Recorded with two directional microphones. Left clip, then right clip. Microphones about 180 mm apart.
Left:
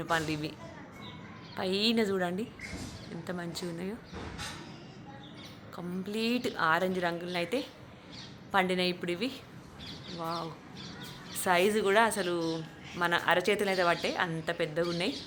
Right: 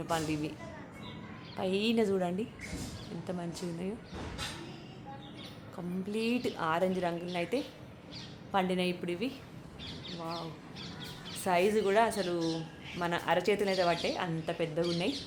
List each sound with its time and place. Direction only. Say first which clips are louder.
0.1 s a woman's voice: left 2 dB; 15° left (ahead or behind)
1.5 s a woman's voice: left 1 dB; 10° left (ahead or behind)
5.7 s a woman's voice: even; 10° left (ahead or behind)
10.2 s speech: left 5 dB; 35° left (ahead or behind)
11.3 s a woman's voice: left 2 dB; 15° left (ahead or behind)